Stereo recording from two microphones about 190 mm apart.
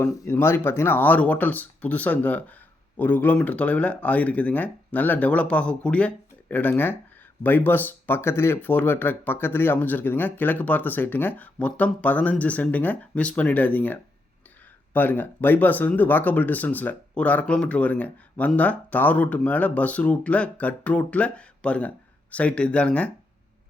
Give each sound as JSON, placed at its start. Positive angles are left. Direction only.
{"t": 0.0, "sound": "speech", "side_deg": 15}